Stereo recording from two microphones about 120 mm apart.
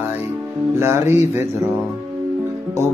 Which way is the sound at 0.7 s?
20° right (ahead or behind).